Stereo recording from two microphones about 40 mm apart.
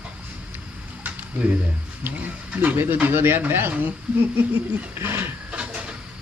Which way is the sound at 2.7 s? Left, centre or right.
Right.